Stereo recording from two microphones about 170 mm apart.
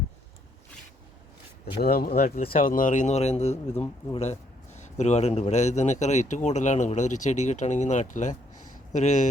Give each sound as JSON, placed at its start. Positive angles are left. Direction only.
{"t": 1.8, "sound": "speech", "side_deg": 60}
{"t": 2.1, "sound": "speech", "side_deg": 40}
{"t": 2.5, "sound": "a man's voice", "side_deg": 55}